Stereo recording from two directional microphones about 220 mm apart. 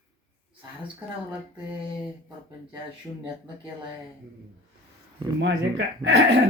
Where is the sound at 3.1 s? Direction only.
15° left (ahead or behind).